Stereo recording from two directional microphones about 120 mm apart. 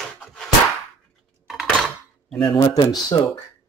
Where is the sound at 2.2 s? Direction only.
5° left (ahead or behind).